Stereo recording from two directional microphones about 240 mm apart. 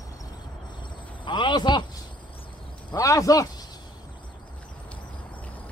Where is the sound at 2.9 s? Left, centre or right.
Centre.